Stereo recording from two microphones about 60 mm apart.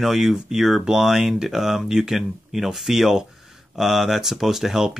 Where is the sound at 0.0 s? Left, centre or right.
Centre.